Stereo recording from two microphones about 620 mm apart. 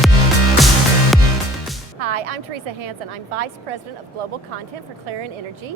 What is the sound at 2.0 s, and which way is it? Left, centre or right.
A woman's voice, right.